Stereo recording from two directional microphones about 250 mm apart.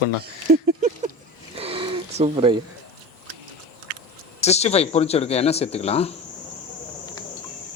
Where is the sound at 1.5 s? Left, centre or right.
Right.